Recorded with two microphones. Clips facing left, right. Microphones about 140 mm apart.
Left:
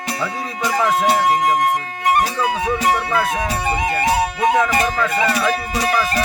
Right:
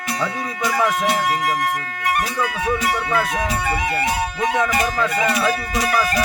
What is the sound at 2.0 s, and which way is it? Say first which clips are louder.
Music: left 4 dB; 20° left (ahead or behind).